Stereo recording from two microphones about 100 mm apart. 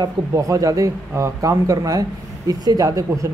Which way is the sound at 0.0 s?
35° right (ahead or behind).